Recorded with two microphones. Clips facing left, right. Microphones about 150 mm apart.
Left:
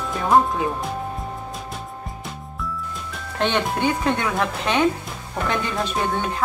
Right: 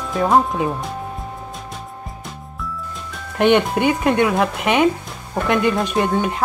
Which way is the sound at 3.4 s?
15° right (ahead or behind).